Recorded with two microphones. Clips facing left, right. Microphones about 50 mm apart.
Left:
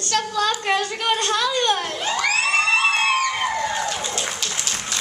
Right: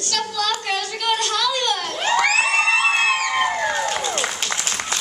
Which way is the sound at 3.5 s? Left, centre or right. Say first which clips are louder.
Right 2 dB; right.